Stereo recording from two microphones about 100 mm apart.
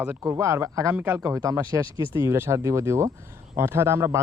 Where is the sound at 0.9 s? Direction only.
15° right (ahead or behind).